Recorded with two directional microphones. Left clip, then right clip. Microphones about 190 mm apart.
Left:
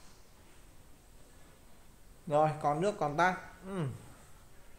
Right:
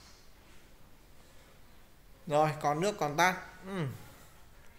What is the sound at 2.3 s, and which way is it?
Speech, centre (ahead or behind).